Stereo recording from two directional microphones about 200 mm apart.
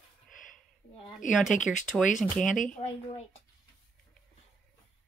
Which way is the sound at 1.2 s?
40° left (ahead or behind).